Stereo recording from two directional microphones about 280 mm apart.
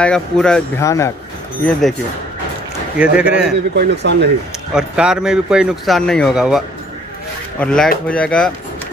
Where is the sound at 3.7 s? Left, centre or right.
Right.